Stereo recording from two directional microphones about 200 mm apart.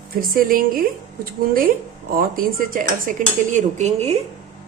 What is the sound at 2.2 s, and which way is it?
A woman's voice, 45° right (ahead or behind).